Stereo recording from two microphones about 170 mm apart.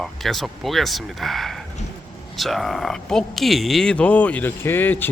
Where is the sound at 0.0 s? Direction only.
Centre (ahead or behind).